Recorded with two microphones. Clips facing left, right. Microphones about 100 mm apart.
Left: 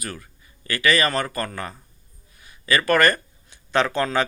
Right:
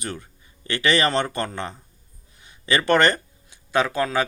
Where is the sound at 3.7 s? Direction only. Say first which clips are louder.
Even; 10° right (ahead or behind).